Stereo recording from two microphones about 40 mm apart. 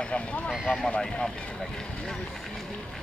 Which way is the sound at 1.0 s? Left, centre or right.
Centre.